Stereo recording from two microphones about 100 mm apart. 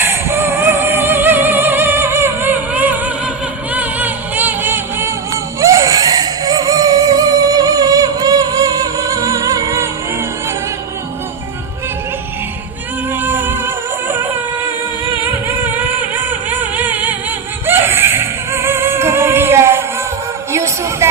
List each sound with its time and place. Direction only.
0.0 s music: 25° right (ahead or behind)
13.2 s music: 20° right (ahead or behind)
20.5 s a sound: 30° right (ahead or behind)